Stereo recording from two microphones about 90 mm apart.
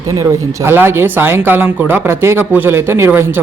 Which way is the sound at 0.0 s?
40° right (ahead or behind).